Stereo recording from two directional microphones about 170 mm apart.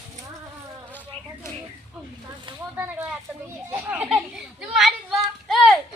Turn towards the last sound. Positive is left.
turn(degrees=0)  # may be behind; listen again after turning